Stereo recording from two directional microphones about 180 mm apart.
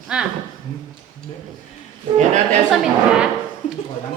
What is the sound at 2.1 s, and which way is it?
Speech, 40° right (ahead or behind).